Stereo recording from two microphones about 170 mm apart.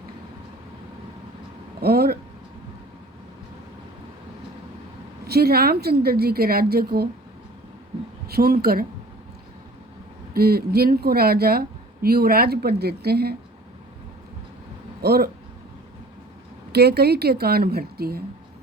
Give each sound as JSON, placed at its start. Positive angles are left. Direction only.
{"t": 1.8, "sound": "speech", "side_deg": -65}
{"t": 5.2, "sound": "a woman's voice", "side_deg": -65}
{"t": 8.3, "sound": "a woman's voice", "side_deg": -65}
{"t": 10.3, "sound": "a woman's voice", "side_deg": -65}
{"t": 15.0, "sound": "a woman's voice", "side_deg": -65}
{"t": 16.7, "sound": "a woman's voice", "side_deg": -70}